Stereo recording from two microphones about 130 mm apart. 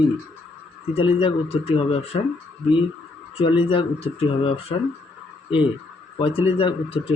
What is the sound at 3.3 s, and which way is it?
A man's voice, 45° left (ahead or behind).